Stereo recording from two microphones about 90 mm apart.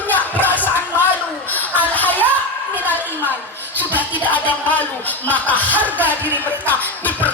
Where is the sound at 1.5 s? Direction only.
20° left (ahead or behind).